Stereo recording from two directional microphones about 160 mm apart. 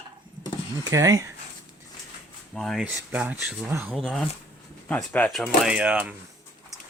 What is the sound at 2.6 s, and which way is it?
Speech, centre (ahead or behind).